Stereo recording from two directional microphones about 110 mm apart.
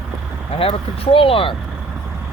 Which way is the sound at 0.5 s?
55° left (ahead or behind).